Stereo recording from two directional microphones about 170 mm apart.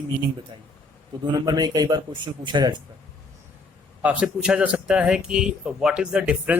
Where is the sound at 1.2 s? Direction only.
25° right (ahead or behind).